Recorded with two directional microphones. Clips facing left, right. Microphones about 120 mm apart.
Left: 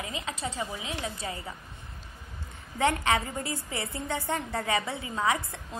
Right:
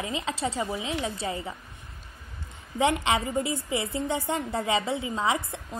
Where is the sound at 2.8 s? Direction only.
20° right (ahead or behind).